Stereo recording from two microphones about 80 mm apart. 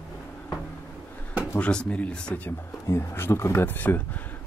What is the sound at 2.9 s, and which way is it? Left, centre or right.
Speech, left.